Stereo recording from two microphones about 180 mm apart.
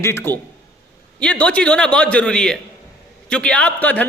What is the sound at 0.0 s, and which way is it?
A man's voice, 15° left (ahead or behind).